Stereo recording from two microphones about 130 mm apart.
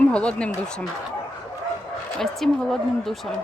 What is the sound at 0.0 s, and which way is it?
Speech, 10° left (ahead or behind).